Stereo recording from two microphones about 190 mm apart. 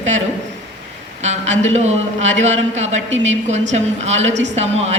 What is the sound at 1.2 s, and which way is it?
Speech, 35° right (ahead or behind).